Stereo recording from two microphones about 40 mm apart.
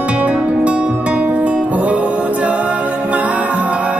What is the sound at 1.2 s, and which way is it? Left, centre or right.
Music, right.